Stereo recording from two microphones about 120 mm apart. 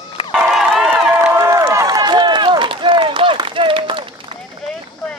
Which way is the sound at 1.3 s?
25° right (ahead or behind).